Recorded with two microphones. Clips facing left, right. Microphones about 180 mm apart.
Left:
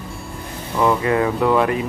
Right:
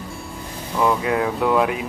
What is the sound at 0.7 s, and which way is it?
Speech, centre (ahead or behind).